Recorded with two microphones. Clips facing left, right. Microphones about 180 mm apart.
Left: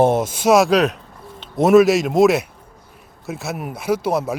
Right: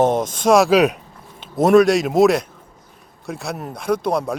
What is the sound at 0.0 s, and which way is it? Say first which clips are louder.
A man's voice: left 1 dB; 10° left (ahead or behind).